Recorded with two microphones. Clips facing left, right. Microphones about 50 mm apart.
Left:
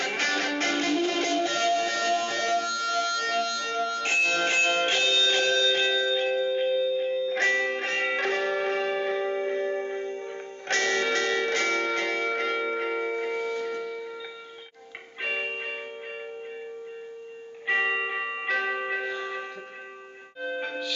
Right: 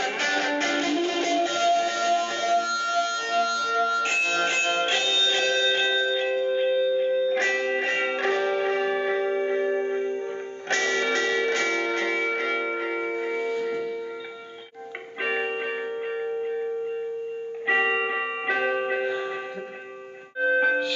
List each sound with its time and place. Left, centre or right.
0.2 s music: right; by 13.8 s centre
15.2 s music: centre
17.6 s music: centre
20.3 s music: centre